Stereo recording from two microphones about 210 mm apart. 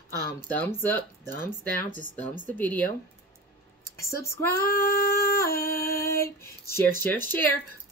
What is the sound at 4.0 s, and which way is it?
Speech, 15° left (ahead or behind).